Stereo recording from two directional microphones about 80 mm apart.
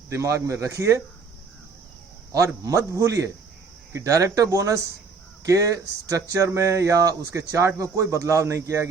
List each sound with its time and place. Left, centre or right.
0.1 s speech: right
2.6 s speech: right